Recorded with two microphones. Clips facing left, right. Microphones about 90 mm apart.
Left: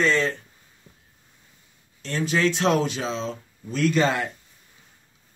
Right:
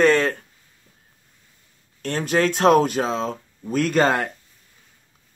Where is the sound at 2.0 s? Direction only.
55° right (ahead or behind).